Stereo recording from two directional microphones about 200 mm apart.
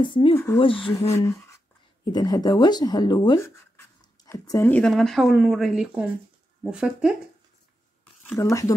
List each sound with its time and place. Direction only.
0.0 s speech: 25° left (ahead or behind)
1.1 s speech: 15° left (ahead or behind); by 7.2 s 5° right (ahead or behind)
8.4 s speech: 15° left (ahead or behind)